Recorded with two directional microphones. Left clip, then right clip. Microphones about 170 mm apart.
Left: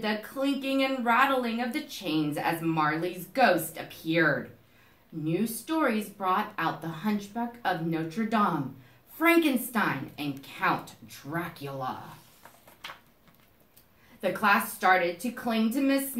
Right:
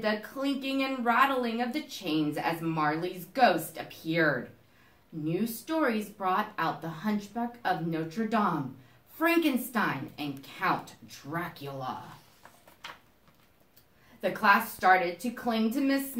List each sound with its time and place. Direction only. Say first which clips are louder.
0.0 s a woman's voice: left 1 dB; 20° left (ahead or behind)
14.2 s speech: even; 15° left (ahead or behind)